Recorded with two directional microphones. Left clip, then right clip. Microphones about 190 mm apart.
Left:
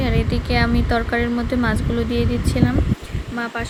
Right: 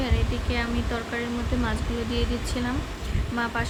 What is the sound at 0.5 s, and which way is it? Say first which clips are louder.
Speech: left 10 dB; 35° left (ahead or behind).